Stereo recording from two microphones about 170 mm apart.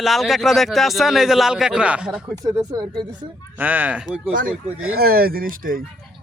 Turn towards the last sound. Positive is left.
turn(degrees=-55)  # may be behind; listen again after turning